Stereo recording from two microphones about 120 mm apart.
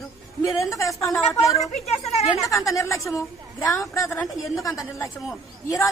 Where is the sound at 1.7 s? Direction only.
65° left (ahead or behind).